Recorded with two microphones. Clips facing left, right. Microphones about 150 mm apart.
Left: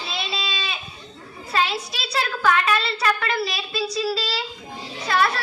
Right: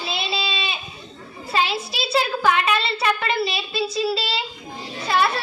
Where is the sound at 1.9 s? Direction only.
25° right (ahead or behind).